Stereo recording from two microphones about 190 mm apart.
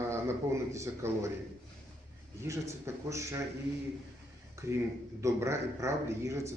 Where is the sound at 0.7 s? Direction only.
15° right (ahead or behind).